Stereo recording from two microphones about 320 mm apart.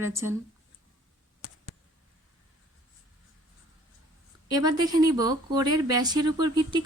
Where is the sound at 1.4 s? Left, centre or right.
Left.